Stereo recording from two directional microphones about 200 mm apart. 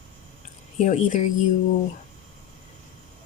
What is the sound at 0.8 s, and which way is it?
Speech, 40° left (ahead or behind).